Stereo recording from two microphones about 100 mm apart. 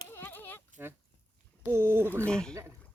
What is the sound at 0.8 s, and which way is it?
Speech, 20° right (ahead or behind).